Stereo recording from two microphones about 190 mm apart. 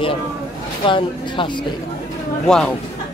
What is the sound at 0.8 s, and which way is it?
Speech, 25° left (ahead or behind).